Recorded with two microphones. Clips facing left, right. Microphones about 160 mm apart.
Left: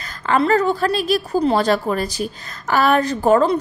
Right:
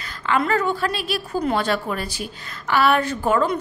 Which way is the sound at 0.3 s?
40° left (ahead or behind).